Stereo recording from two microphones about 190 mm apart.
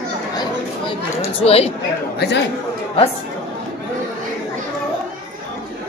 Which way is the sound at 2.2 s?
60° left (ahead or behind).